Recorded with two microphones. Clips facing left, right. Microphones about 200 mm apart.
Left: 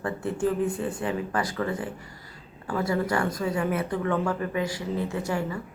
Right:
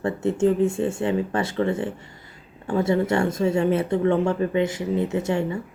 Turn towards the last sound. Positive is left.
turn(degrees=-25)  # may be behind; listen again after turning